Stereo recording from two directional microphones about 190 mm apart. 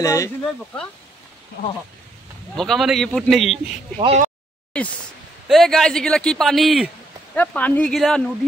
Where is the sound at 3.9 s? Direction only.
35° right (ahead or behind).